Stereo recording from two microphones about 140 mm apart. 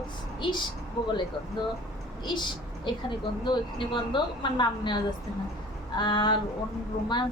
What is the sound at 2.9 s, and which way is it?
A woman's voice, 35° left (ahead or behind).